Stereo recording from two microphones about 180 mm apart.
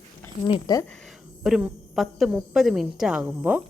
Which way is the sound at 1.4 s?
5° right (ahead or behind).